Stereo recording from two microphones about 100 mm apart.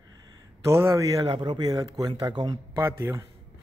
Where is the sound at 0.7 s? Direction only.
25° right (ahead or behind).